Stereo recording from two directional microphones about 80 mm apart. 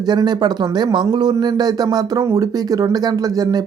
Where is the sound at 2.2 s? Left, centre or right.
Right.